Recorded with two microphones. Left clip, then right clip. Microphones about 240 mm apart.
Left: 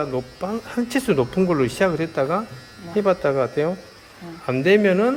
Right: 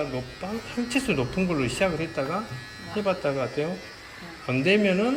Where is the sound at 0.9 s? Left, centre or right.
Left.